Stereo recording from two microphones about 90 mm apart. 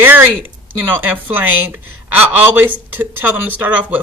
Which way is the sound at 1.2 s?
20° right (ahead or behind).